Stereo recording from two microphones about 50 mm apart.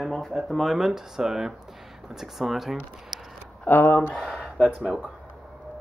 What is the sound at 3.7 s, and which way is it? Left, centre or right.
Speech, left.